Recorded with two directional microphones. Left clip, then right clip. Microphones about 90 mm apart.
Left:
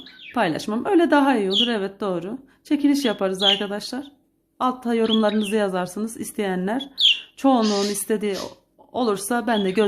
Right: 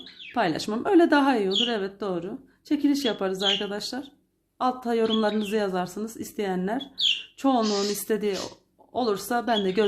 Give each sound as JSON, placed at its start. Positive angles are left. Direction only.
{"t": 0.3, "sound": "speech", "side_deg": 15}
{"t": 1.5, "sound": "speech", "side_deg": 20}
{"t": 5.0, "sound": "speech", "side_deg": 25}
{"t": 8.0, "sound": "speech", "side_deg": 10}
{"t": 8.9, "sound": "speech", "side_deg": 20}